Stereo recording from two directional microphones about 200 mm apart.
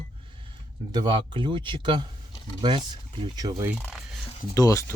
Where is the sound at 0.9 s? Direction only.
25° right (ahead or behind).